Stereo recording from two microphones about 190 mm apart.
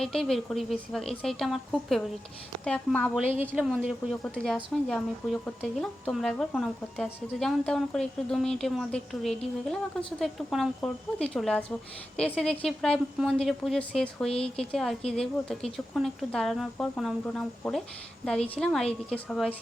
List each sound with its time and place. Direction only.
0.0 s speech: 5° left (ahead or behind)
14.3 s speech: 30° left (ahead or behind)
14.6 s speech: 5° left (ahead or behind)